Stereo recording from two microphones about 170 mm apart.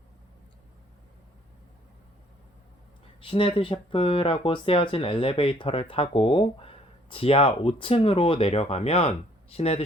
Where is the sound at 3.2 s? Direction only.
30° left (ahead or behind).